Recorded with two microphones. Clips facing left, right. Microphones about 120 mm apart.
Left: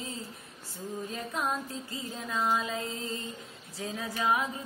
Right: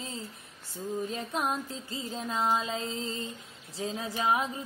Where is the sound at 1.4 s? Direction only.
20° right (ahead or behind).